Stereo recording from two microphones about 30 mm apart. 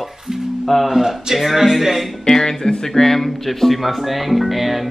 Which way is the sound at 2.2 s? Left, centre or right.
Centre.